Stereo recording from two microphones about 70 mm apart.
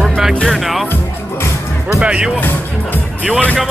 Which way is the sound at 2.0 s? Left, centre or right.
Centre.